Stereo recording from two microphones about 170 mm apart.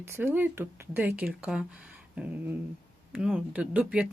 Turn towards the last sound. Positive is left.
turn(degrees=-5)  # may be behind; listen again after turning